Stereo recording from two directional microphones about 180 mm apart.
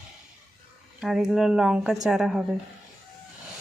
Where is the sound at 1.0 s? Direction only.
5° right (ahead or behind).